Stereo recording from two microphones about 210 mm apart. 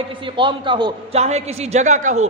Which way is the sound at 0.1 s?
25° right (ahead or behind).